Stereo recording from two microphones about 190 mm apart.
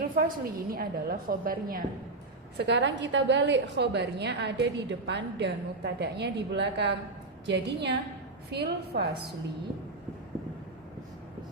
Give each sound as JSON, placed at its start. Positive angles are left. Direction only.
{"t": 0.0, "sound": "a woman's voice", "side_deg": -45}
{"t": 2.6, "sound": "a woman's voice", "side_deg": -65}